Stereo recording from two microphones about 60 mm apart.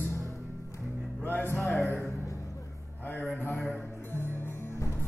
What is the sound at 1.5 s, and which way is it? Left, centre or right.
Music, centre.